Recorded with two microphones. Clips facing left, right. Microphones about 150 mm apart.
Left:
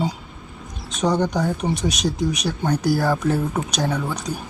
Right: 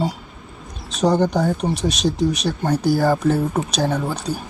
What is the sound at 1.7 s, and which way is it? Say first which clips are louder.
Speech: right 2 dB; 30° right (ahead or behind).